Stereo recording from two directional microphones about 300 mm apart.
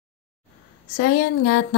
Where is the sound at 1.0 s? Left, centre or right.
Left.